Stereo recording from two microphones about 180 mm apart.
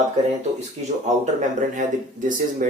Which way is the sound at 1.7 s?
45° right (ahead or behind).